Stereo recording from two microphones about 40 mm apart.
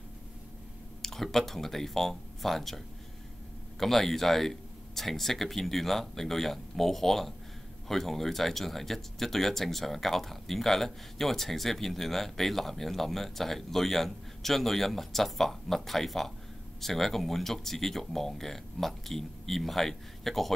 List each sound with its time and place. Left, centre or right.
1.0 s speech: centre
3.8 s speech: centre